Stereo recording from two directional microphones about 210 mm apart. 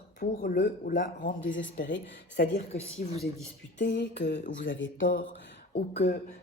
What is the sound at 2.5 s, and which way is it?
Speech, 30° left (ahead or behind).